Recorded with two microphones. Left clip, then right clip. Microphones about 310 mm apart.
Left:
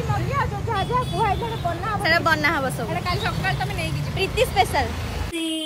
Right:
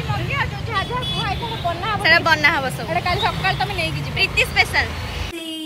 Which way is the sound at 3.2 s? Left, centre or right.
Centre.